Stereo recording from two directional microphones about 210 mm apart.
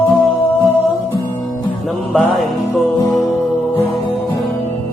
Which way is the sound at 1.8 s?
Centre (ahead or behind).